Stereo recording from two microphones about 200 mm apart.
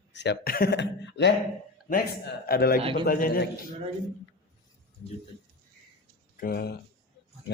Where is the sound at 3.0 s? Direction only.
45° left (ahead or behind).